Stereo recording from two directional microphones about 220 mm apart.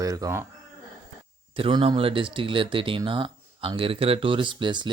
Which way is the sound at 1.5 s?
25° right (ahead or behind).